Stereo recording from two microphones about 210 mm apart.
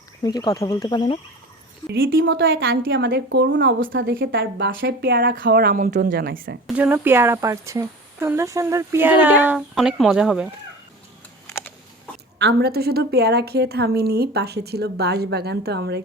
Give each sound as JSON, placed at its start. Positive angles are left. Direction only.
{"t": 0.2, "sound": "speech", "side_deg": 20}
{"t": 2.0, "sound": "a woman's voice", "side_deg": -65}
{"t": 2.9, "sound": "a woman's voice", "side_deg": -55}
{"t": 6.7, "sound": "speech", "side_deg": -10}
{"t": 11.4, "sound": "a sound", "side_deg": 15}
{"t": 12.4, "sound": "a woman's voice", "side_deg": -50}